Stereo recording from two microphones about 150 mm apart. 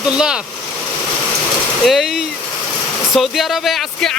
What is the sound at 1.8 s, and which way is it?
Speech, centre (ahead or behind).